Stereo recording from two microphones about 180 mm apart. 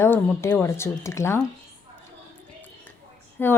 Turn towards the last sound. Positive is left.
turn(degrees=10)  # may be behind; listen again after turning